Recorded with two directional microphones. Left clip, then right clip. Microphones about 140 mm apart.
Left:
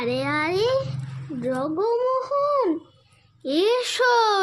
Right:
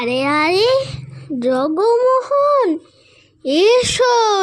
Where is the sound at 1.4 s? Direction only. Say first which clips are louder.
Right 9 dB; 70° right (ahead or behind); by 2.7 s 55° right (ahead or behind).